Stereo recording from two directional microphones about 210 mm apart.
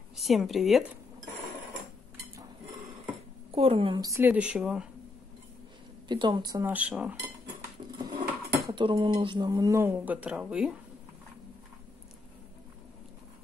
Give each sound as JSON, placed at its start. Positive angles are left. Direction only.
{"t": 0.1, "sound": "speech", "side_deg": 0}
{"t": 3.5, "sound": "speech", "side_deg": -25}
{"t": 6.0, "sound": "speech", "side_deg": -20}
{"t": 8.0, "sound": "speech", "side_deg": -20}